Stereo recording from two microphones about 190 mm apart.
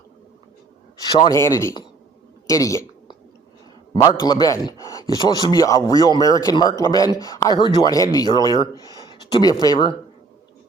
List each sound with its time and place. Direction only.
1.2 s speech: 15° left (ahead or behind)
2.5 s a sound: 15° left (ahead or behind)
4.0 s speech: 20° left (ahead or behind)